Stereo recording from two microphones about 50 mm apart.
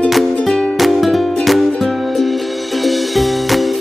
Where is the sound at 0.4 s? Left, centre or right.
Centre.